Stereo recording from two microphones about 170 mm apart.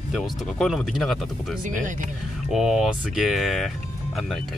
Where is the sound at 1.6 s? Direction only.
50° right (ahead or behind).